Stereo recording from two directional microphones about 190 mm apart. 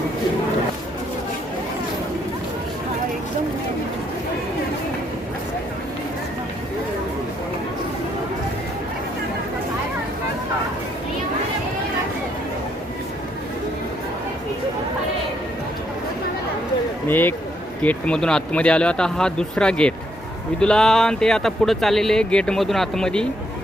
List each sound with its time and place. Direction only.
17.1 s speech: 10° left (ahead or behind)